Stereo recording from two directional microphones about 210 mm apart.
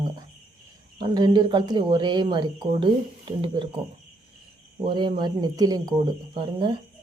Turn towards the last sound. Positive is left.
turn(degrees=-20)  # may be behind; listen again after turning